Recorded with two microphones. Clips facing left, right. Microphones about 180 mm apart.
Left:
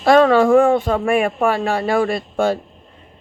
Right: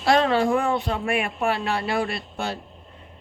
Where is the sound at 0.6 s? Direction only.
50° left (ahead or behind).